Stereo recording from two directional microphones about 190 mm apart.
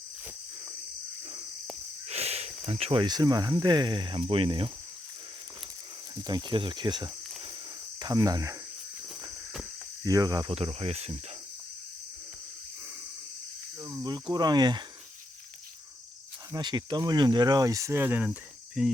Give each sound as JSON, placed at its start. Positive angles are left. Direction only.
{"t": 2.0, "sound": "a sound", "side_deg": -35}
{"t": 2.6, "sound": "speech", "side_deg": -30}
{"t": 6.1, "sound": "speech", "side_deg": -20}
{"t": 7.9, "sound": "cricket", "side_deg": -20}
{"t": 10.0, "sound": "speech", "side_deg": -20}
{"t": 13.8, "sound": "speech", "side_deg": -20}
{"t": 16.5, "sound": "speech", "side_deg": -20}
{"t": 18.3, "sound": "cricket", "side_deg": 0}